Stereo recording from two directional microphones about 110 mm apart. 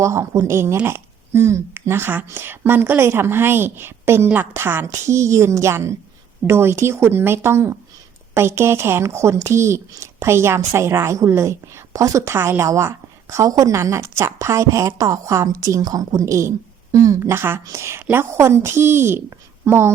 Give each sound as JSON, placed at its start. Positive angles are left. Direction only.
{"t": 0.0, "sound": "a woman's voice", "side_deg": -25}